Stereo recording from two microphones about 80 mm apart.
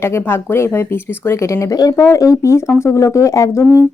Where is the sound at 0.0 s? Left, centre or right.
Left.